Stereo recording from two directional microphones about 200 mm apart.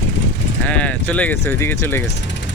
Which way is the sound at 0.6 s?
5° left (ahead or behind).